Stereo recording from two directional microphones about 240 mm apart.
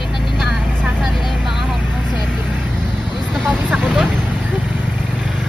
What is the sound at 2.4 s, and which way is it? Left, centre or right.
Vehicle, centre.